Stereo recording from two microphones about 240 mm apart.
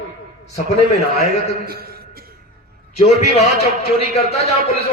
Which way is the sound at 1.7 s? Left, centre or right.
Right.